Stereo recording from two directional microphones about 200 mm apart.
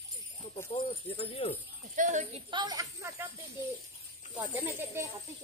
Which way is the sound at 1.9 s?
40° right (ahead or behind).